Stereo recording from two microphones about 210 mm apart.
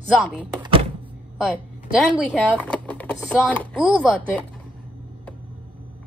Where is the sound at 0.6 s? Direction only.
25° right (ahead or behind).